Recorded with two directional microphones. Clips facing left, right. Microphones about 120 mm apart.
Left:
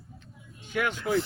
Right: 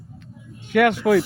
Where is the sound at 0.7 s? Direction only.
70° right (ahead or behind).